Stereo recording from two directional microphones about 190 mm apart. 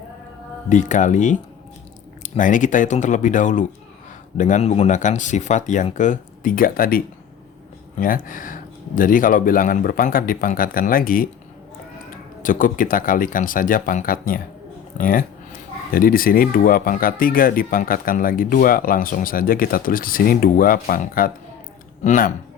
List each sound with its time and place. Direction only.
0.7 s speech: 40° left (ahead or behind)
12.4 s speech: 45° left (ahead or behind)